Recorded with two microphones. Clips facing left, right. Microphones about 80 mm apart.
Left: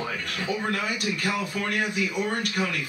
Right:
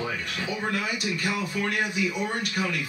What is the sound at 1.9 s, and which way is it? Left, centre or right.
Speech, left.